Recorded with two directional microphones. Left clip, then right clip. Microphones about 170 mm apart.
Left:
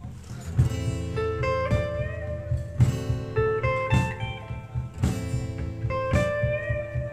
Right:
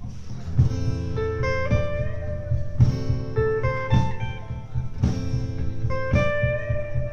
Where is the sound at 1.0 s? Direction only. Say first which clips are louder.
Right 1 dB; 25° left (ahead or behind).